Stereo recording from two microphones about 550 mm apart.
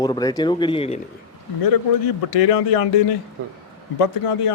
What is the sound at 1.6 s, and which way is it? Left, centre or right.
A man's voice, left.